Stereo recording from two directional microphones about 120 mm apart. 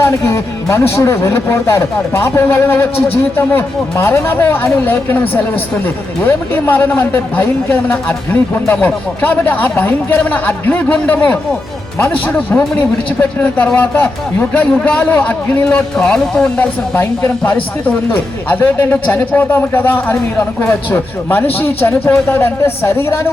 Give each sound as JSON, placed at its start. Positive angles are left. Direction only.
{"t": 0.0, "sound": "a man's voice", "side_deg": 25}